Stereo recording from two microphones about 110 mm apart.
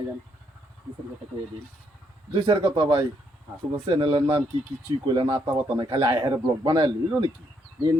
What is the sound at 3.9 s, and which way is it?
A man's voice, 50° right (ahead or behind).